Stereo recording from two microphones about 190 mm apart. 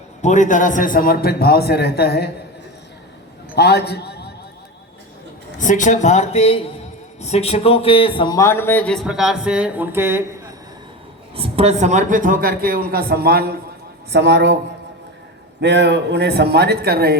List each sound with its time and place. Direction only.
0.2 s a man's voice: 40° left (ahead or behind); by 2.3 s 55° left (ahead or behind)
3.5 s a man's voice: 60° left (ahead or behind)
5.5 s a man's voice: 40° left (ahead or behind); by 10.2 s 10° right (ahead or behind)
11.3 s a man's voice: 30° right (ahead or behind); by 14.5 s 65° right (ahead or behind)
15.6 s a man's voice: 65° right (ahead or behind)